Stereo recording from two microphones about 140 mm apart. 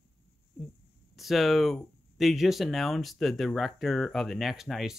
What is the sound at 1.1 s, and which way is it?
Speech, centre (ahead or behind).